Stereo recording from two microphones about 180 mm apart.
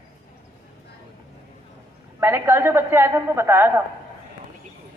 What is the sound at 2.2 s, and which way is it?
A woman's voice, 10° right (ahead or behind).